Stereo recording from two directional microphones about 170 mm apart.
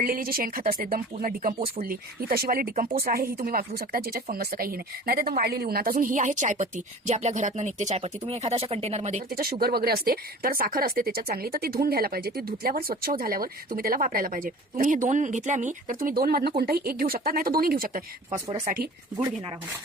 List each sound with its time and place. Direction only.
0.0 s speech: 60° right (ahead or behind)
1.5 s speech: 35° right (ahead or behind)
1.8 s a woman's voice: 60° right (ahead or behind); by 9.2 s 40° right (ahead or behind)
9.3 s a woman's voice: 60° right (ahead or behind)